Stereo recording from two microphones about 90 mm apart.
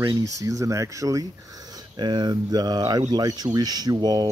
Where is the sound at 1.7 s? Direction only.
55° right (ahead or behind).